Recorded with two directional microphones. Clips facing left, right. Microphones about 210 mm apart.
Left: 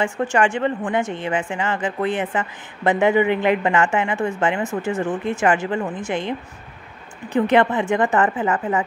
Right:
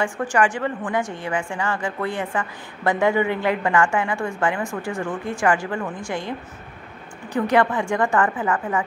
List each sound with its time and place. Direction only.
0.0 s a woman's voice: 25° left (ahead or behind)
7.3 s a woman's voice: 20° left (ahead or behind)